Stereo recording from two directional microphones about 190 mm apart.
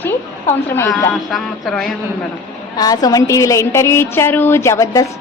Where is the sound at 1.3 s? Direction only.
Centre (ahead or behind).